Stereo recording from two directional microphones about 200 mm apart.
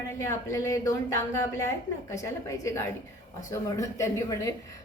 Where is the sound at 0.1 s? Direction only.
15° left (ahead or behind).